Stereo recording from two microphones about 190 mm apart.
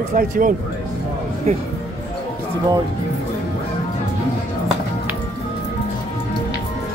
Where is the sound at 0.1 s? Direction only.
45° right (ahead or behind).